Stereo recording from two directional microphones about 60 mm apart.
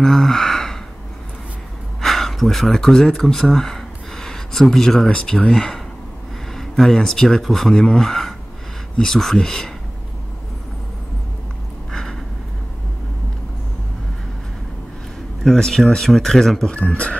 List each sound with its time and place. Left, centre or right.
0.0 s speech: centre
2.0 s speech: centre
11.9 s a sound: centre
15.4 s speech: centre
16.7 s speech: left